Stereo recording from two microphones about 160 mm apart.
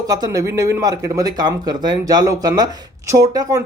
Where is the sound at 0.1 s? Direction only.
20° right (ahead or behind).